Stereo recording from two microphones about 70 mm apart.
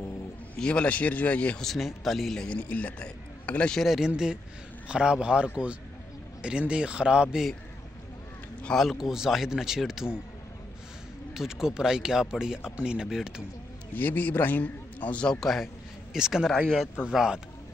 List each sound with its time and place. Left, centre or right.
0.6 s a man's voice: centre
1.6 s speech: centre
2.3 s a man's voice: centre
3.7 s speech: centre
6.7 s speech: centre
8.8 s speech: centre
11.3 s speech: centre
13.9 s a man's voice: left
15.4 s a man's voice: centre
16.4 s speech: centre
17.1 s speech: centre